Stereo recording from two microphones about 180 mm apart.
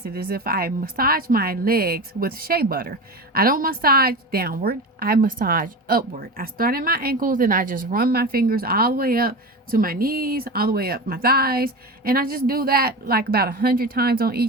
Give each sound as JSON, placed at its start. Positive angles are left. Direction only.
{"t": 0.0, "sound": "a woman's voice", "side_deg": -60}